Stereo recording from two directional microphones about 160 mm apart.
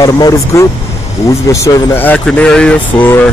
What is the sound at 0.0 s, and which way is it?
Speech, 20° left (ahead or behind).